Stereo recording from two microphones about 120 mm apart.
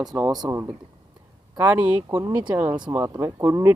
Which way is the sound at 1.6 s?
10° right (ahead or behind).